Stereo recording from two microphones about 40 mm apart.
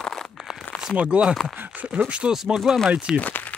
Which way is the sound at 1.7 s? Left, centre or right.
Right.